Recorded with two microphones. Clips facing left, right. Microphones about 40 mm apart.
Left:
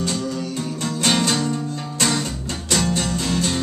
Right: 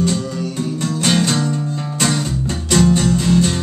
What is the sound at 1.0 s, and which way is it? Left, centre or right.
Music, centre.